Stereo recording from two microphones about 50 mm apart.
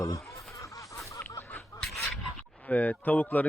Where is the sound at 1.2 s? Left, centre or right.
Left.